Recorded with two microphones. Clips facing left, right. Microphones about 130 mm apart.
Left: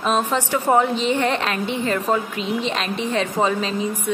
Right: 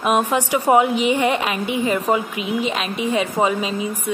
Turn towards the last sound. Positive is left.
turn(degrees=-10)  # may be behind; listen again after turning